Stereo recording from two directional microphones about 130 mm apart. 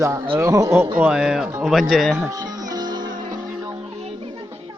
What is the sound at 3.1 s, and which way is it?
Music, 90° right.